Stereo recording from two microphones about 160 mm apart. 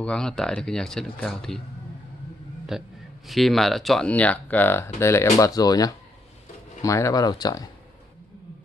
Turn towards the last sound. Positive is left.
turn(degrees=25)  # may be behind; listen again after turning